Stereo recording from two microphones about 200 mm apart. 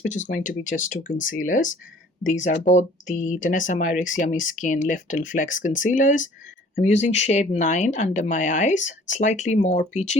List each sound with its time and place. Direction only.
0.0 s speech: 40° left (ahead or behind)